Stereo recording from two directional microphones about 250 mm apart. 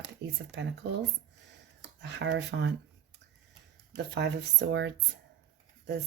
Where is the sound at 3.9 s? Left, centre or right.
Right.